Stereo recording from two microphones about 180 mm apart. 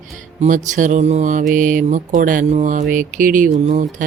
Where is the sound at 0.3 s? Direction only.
45° right (ahead or behind).